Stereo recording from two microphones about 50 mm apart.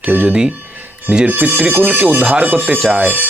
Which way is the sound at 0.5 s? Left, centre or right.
Right.